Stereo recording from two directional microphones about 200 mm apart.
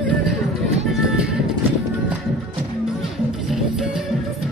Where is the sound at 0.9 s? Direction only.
5° right (ahead or behind).